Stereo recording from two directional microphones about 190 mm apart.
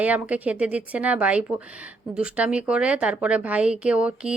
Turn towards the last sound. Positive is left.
turn(degrees=-5)  # may be behind; listen again after turning